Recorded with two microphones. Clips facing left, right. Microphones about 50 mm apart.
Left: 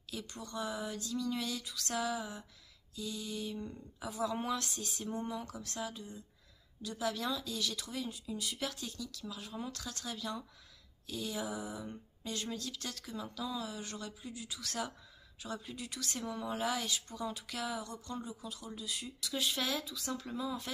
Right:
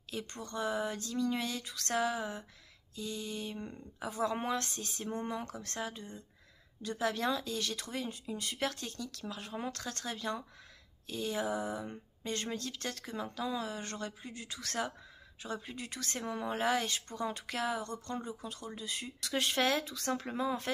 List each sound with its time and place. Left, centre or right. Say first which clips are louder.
0.1 s speech: right 2 dB; right
19.2 s speech: right 5 dB; right